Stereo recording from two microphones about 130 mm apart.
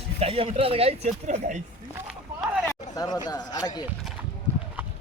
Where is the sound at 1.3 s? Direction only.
70° right (ahead or behind).